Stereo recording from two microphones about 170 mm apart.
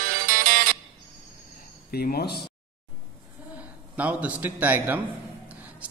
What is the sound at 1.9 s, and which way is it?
Speech, 65° left (ahead or behind).